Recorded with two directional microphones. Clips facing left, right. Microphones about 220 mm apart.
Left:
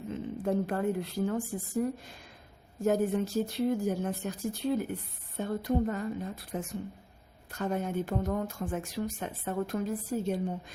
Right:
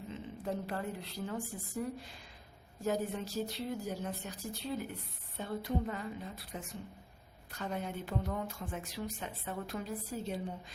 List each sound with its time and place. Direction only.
0.1 s speech: 50° left (ahead or behind)